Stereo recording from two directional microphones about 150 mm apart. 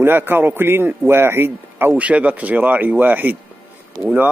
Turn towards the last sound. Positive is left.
turn(degrees=-10)  # may be behind; listen again after turning